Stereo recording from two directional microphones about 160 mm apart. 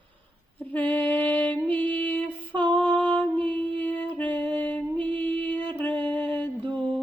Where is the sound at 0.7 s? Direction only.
10° left (ahead or behind).